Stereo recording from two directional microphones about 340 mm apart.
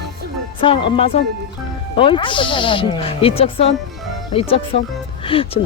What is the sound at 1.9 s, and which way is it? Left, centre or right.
Speech, centre.